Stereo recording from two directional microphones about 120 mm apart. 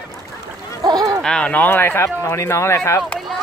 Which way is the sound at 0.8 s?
30° right (ahead or behind).